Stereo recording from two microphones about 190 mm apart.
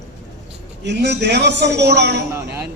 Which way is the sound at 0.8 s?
65° right (ahead or behind).